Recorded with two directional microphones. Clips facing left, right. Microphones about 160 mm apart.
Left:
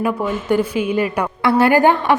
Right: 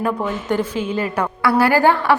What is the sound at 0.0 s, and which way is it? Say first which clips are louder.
A woman's voice: left 2 dB; 10° left (ahead or behind).